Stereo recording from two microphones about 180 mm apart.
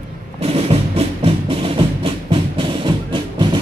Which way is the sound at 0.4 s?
35° right (ahead or behind).